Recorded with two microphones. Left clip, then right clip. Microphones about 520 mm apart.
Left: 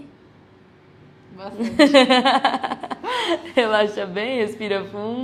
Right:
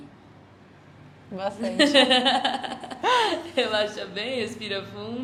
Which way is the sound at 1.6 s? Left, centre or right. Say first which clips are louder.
Left 5 dB; left.